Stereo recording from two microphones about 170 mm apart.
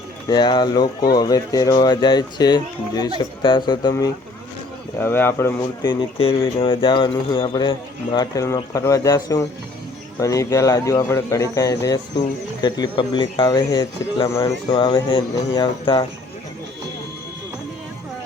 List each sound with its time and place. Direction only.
0.3 s speech: 25° left (ahead or behind)
4.9 s speech: 10° left (ahead or behind)
5.8 s speech: 30° left (ahead or behind)